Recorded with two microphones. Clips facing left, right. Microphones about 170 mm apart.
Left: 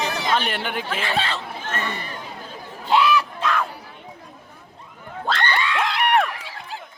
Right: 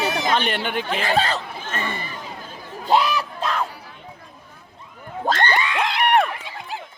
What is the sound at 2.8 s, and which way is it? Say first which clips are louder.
Crowd: left 1 dB; 40° right (ahead or behind).